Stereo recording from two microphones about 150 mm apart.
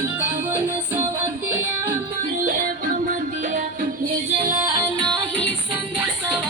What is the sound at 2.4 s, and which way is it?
Music, 70° right (ahead or behind).